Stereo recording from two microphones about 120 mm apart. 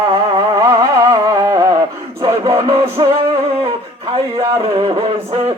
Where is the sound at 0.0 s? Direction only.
40° right (ahead or behind).